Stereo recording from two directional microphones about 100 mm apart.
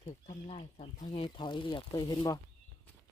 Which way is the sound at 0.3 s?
70° left (ahead or behind).